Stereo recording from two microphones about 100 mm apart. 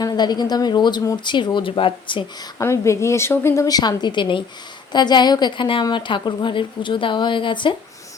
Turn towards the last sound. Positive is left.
turn(degrees=55)  # may be behind; listen again after turning